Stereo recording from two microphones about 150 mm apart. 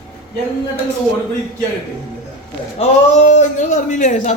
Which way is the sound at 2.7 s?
45° left (ahead or behind).